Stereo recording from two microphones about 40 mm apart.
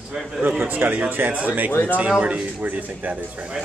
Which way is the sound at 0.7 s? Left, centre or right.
Right.